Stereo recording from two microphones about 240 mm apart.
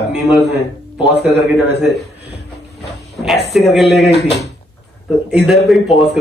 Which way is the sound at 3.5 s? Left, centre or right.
Centre.